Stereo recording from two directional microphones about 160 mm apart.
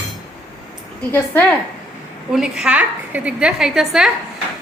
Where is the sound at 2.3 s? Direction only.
5° right (ahead or behind).